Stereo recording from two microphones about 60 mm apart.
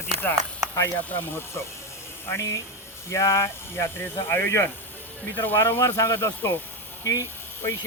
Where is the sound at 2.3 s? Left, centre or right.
Left.